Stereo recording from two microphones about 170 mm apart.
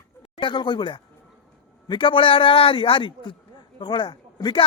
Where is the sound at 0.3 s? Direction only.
25° left (ahead or behind).